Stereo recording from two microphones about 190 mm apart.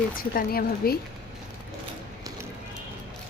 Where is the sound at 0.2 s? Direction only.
50° left (ahead or behind).